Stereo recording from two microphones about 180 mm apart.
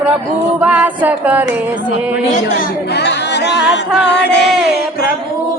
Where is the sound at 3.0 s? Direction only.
70° left (ahead or behind).